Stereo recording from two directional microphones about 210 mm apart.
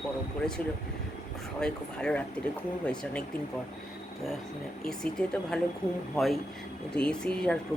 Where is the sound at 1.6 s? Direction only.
5° left (ahead or behind).